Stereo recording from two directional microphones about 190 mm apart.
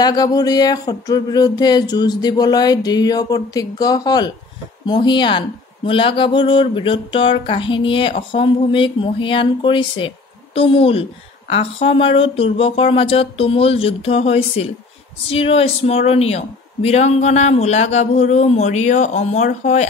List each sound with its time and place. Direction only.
0.0 s a woman's voice: 20° left (ahead or behind); by 19.9 s 40° left (ahead or behind)